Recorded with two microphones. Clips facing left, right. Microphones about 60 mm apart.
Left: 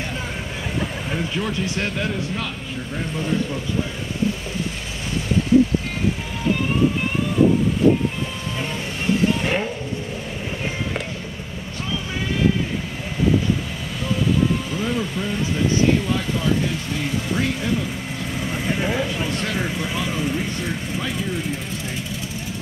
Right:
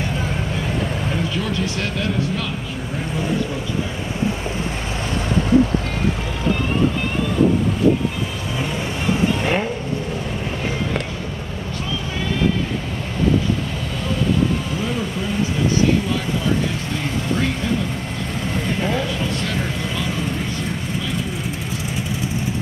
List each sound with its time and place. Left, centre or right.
1.3 s speech: left
9.4 s vehicle: centre
18.5 s vehicle: centre